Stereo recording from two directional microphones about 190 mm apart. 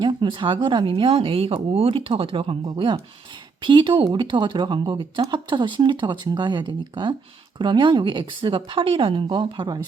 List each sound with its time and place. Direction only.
0.0 s speech: 25° right (ahead or behind)